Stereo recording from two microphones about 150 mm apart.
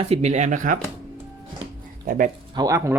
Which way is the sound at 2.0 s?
70° right (ahead or behind).